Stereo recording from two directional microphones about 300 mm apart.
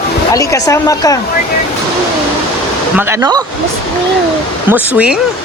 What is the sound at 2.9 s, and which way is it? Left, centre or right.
Speech, centre.